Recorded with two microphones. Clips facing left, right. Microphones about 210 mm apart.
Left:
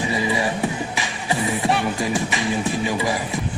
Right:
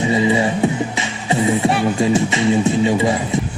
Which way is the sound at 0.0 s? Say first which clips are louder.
Right 6 dB; 25° right (ahead or behind).